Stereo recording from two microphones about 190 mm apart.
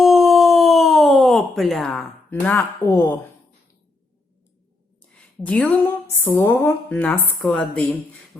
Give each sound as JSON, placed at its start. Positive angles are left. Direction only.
{"t": 0.0, "sound": "a sound", "side_deg": 0}
{"t": 2.3, "sound": "speech", "side_deg": 10}
{"t": 5.0, "sound": "a woman's voice", "side_deg": 5}